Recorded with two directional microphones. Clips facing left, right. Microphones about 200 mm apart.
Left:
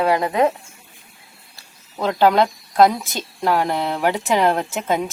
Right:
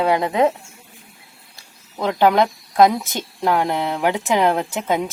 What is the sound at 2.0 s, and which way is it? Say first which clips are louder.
A woman's voice: even; 15° right (ahead or behind).